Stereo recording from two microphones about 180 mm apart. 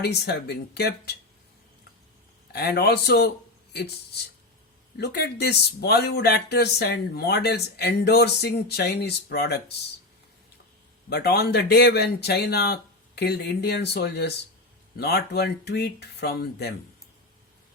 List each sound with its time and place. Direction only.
0.0 s speech: 65° left (ahead or behind)
2.5 s a man's voice: 65° left (ahead or behind)
4.9 s speech: 65° left (ahead or behind)
11.1 s speech: 65° left (ahead or behind)